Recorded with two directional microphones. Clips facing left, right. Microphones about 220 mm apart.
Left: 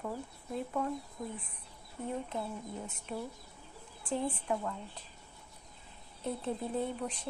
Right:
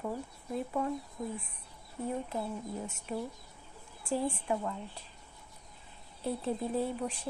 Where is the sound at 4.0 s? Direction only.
10° right (ahead or behind).